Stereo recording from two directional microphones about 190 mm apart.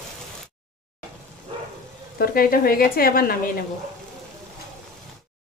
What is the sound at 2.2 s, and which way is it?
Speech, 50° left (ahead or behind).